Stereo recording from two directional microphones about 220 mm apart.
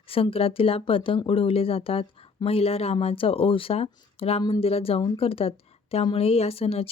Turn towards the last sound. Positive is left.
turn(degrees=25)  # may be behind; listen again after turning